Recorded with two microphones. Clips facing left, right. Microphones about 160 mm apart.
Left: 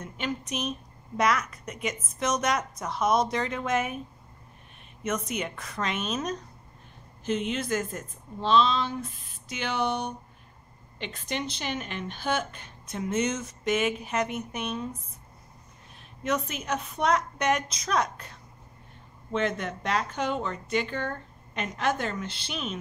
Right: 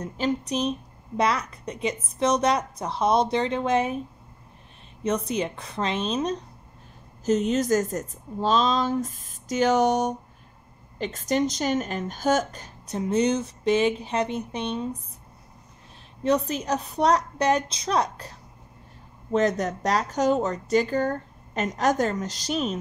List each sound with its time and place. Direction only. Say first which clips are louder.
0.0 s a woman's voice: right 7 dB; 35° right (ahead or behind)
5.0 s speech: right 5 dB; 30° right (ahead or behind)
7.2 s a woman's voice: right 7 dB; 40° right (ahead or behind)
16.2 s a woman's voice: right 6 dB; 35° right (ahead or behind)